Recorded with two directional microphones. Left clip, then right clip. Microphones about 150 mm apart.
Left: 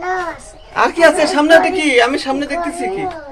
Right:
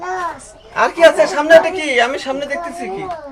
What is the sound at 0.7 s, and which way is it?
A man's voice, 25° left (ahead or behind).